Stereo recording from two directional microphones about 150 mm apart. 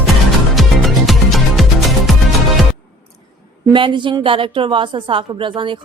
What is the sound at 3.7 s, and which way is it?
A woman's voice, 35° right (ahead or behind).